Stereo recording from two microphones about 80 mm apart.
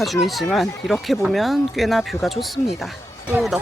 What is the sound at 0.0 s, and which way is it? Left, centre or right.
Speech, centre.